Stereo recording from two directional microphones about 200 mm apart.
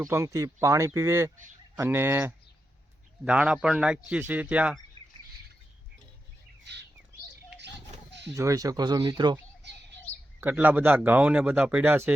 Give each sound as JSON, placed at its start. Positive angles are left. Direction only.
{"t": 0.0, "sound": "speech", "side_deg": -15}
{"t": 8.4, "sound": "speech", "side_deg": -15}
{"t": 10.1, "sound": "bird", "side_deg": 30}
{"t": 10.4, "sound": "speech", "side_deg": -10}